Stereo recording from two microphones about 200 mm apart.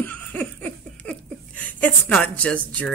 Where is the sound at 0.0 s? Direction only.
10° left (ahead or behind).